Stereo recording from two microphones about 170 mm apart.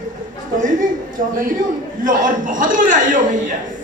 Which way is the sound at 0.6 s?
50° right (ahead or behind).